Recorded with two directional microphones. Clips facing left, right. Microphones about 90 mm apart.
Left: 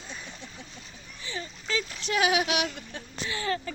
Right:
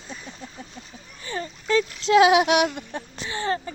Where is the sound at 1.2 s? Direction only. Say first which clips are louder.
Right 6 dB; 50° right (ahead or behind).